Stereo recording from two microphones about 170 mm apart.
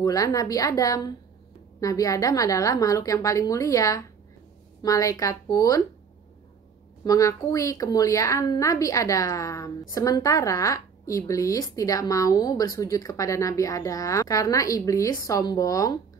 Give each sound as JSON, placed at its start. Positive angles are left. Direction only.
{"t": 0.0, "sound": "a woman's voice", "side_deg": 20}
{"t": 7.1, "sound": "a woman's voice", "side_deg": 20}